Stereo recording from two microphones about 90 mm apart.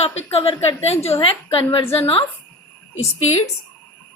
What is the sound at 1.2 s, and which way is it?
A woman's voice, 90° left.